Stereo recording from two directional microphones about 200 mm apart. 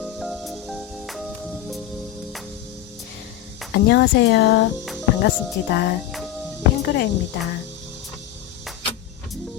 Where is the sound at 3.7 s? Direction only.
55° left (ahead or behind).